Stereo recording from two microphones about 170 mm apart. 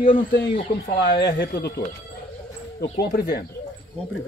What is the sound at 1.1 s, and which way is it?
Speech, 85° left.